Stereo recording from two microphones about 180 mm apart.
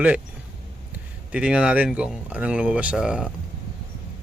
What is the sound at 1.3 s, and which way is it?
Speech, 5° right (ahead or behind).